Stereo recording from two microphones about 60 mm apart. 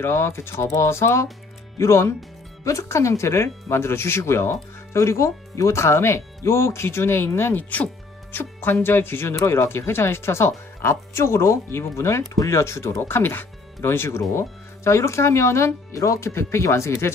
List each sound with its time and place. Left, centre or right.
0.0 s speech: left
13.0 s speech: left